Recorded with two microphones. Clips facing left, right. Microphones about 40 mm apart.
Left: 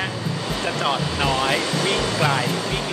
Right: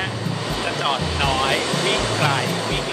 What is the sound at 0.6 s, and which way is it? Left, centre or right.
Speech, centre.